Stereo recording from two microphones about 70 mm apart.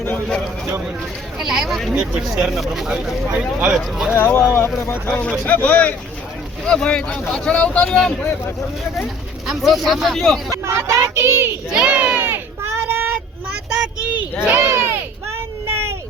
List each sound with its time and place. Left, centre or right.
1.4 s speech: centre
3.8 s speech: centre
4.1 s speech: left
5.0 s speech: centre
7.9 s speech: centre
9.5 s speech: centre
10.5 s speech: right
11.7 s a child's voice: centre
12.2 s a sound: right
14.6 s a sound: right
15.6 s child singing: right